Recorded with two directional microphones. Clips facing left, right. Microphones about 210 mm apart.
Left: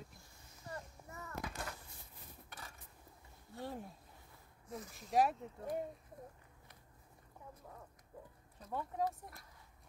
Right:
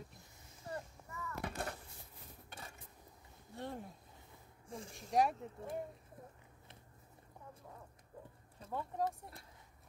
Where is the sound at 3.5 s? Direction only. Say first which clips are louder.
Even; centre (ahead or behind).